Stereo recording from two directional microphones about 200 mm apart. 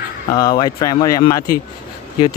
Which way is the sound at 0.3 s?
20° left (ahead or behind).